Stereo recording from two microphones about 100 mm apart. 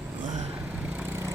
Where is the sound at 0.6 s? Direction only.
15° right (ahead or behind).